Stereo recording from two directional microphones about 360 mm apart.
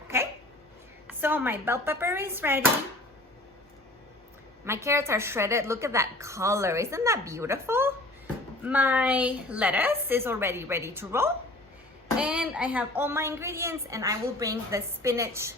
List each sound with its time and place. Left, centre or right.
1.0 s a woman's voice: centre
4.6 s a woman's voice: centre